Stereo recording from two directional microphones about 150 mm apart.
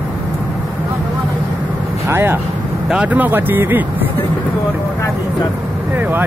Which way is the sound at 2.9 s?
10° right (ahead or behind).